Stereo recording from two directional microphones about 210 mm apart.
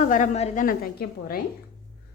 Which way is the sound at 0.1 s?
35° left (ahead or behind).